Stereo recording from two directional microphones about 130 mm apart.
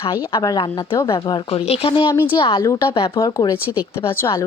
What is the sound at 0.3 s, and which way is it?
Speech, 35° left (ahead or behind).